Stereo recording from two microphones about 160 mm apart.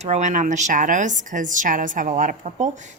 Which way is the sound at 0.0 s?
45° right (ahead or behind).